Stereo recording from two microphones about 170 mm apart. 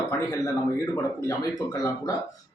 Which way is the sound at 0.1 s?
20° left (ahead or behind).